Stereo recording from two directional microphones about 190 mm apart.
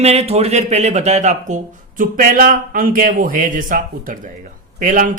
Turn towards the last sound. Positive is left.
turn(degrees=-45)  # may be behind; listen again after turning